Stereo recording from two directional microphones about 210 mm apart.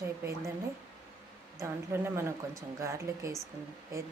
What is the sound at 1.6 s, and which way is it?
Speech, 10° right (ahead or behind).